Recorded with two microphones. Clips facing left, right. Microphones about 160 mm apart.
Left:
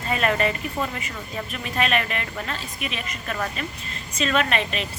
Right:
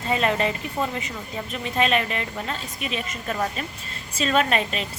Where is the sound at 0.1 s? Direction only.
25° right (ahead or behind).